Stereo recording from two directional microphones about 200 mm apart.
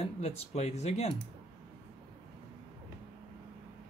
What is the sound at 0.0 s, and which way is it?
Speech, 35° left (ahead or behind).